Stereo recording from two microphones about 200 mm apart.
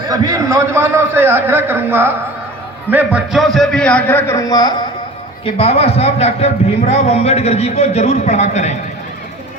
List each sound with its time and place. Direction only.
0.1 s a man's voice: 15° right (ahead or behind); by 8.7 s 35° left (ahead or behind)